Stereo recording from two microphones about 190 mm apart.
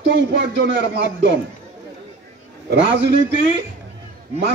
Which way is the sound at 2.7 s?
70° right (ahead or behind).